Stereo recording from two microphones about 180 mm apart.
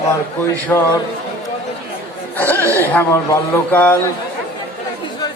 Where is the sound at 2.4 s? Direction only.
10° left (ahead or behind).